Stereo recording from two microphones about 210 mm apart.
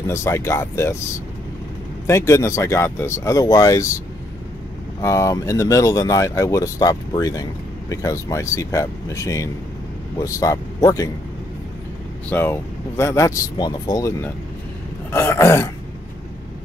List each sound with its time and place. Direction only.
0.0 s speech: 15° left (ahead or behind)
2.0 s speech: 15° left (ahead or behind)
5.0 s speech: 15° left (ahead or behind)
12.3 s speech: 10° left (ahead or behind)
15.0 s a sound: 10° left (ahead or behind)